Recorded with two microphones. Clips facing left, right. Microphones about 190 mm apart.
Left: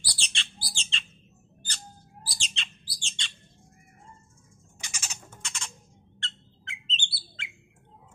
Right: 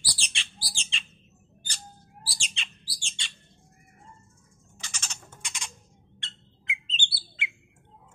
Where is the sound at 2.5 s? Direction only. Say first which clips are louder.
Left 1 dB; 10° right (ahead or behind).